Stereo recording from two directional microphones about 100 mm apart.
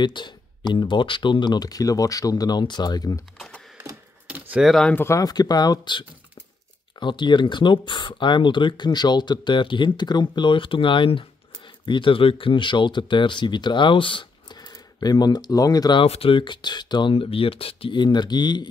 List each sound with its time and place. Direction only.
0.0 s speech: 50° left (ahead or behind)
4.3 s a sound: 15° right (ahead or behind)
4.6 s speech: 5° left (ahead or behind)
4.9 s speech: 25° left (ahead or behind)
5.2 s speech: 40° left (ahead or behind)
16.0 s speech: 70° left (ahead or behind); by 17.1 s 50° left (ahead or behind)
17.1 s speech: 70° left (ahead or behind); by 18.7 s 45° left (ahead or behind)